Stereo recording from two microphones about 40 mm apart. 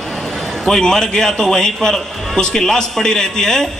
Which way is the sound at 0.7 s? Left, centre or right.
Centre.